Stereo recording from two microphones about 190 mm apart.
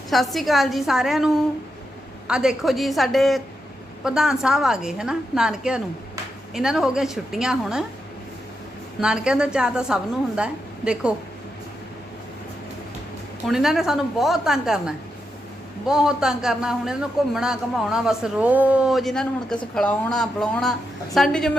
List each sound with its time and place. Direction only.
0.1 s a man's voice: centre (ahead or behind)
9.0 s a man's voice: 5° right (ahead or behind)
13.5 s a man's voice: centre (ahead or behind)